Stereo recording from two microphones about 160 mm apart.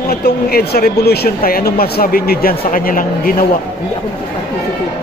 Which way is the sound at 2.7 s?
60° left (ahead or behind).